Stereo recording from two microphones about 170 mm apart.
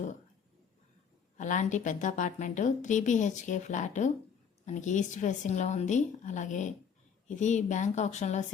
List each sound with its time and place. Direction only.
1.4 s a woman's voice: 45° left (ahead or behind)